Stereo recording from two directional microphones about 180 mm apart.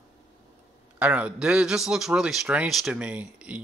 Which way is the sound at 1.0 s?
5° right (ahead or behind).